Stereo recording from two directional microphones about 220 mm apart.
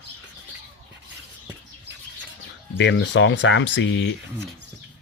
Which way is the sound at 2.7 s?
55° left (ahead or behind).